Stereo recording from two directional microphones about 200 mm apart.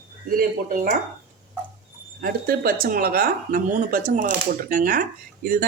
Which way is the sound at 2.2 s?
45° right (ahead or behind).